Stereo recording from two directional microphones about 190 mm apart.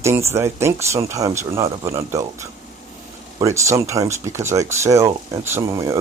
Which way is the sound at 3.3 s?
15° right (ahead or behind).